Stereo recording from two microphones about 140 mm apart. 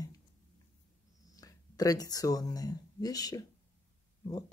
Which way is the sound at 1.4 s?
25° left (ahead or behind).